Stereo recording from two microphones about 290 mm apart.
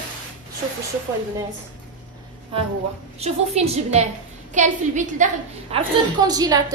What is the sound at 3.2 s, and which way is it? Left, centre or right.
A woman's voice, right.